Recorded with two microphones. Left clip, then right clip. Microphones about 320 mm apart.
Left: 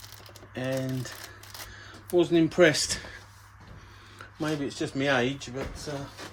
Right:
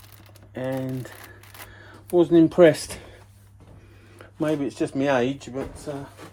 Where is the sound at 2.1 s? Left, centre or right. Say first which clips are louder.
Right 6 dB; centre.